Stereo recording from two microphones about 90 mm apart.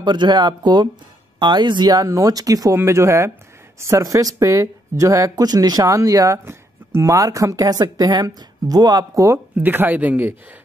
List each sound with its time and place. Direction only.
0.0 s speech: 55° right (ahead or behind); by 2.8 s 40° right (ahead or behind)
2.8 s speech: 30° right (ahead or behind)
9.6 s speech: 20° right (ahead or behind)